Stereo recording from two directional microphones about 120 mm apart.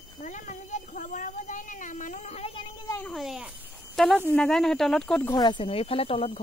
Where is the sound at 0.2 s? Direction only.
90° left; by 2.5 s 65° left (ahead or behind).